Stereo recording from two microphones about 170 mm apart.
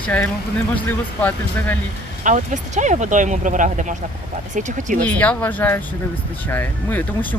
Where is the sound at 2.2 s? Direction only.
45° right (ahead or behind).